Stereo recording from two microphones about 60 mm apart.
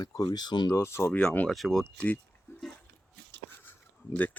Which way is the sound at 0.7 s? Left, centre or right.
Left.